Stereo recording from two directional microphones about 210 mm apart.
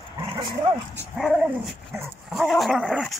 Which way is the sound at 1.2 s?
Centre (ahead or behind).